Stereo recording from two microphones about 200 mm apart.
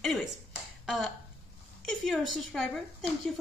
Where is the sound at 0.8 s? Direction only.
Centre (ahead or behind).